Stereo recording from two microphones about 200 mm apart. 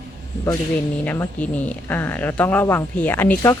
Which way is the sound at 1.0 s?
10° left (ahead or behind).